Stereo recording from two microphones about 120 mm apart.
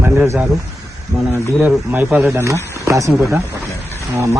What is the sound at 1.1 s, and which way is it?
Speech, 5° right (ahead or behind).